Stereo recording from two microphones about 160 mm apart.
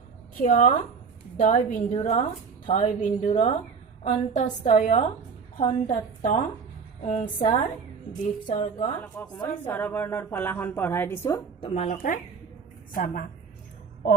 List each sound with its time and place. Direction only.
0.3 s a woman's voice: 55° left (ahead or behind)
9.3 s a woman's voice: 10° left (ahead or behind)
11.6 s speech: 40° left (ahead or behind)
12.9 s speech: 60° left (ahead or behind)